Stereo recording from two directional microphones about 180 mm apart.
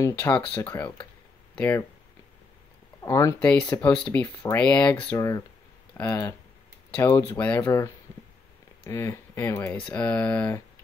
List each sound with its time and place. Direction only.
0.0 s speech: 15° left (ahead or behind)
3.0 s speech: 15° left (ahead or behind)
5.1 s speech: 15° left (ahead or behind)